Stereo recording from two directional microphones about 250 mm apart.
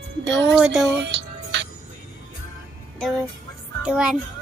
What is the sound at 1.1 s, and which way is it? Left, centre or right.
Music, right.